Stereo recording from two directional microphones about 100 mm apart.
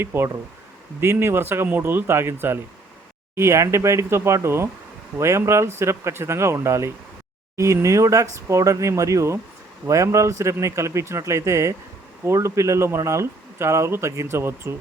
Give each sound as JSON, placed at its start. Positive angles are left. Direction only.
{"t": 0.0, "sound": "speech", "side_deg": -25}